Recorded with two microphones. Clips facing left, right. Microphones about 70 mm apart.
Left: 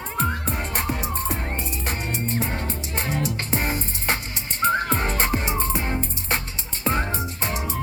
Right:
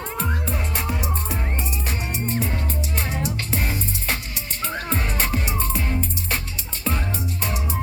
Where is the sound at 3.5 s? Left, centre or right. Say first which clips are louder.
Left 1 dB; left.